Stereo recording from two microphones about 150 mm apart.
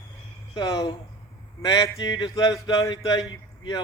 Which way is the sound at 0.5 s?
25° left (ahead or behind).